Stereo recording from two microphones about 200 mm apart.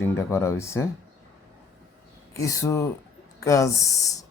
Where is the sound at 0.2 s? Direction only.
15° left (ahead or behind).